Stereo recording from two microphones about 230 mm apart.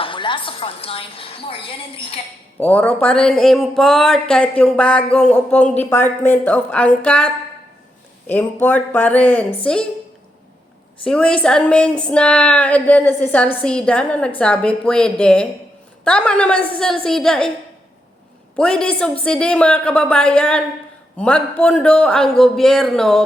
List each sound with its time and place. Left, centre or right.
0.0 s a woman's voice: left
2.6 s speech: centre
8.3 s speech: centre
11.0 s speech: centre
18.5 s speech: centre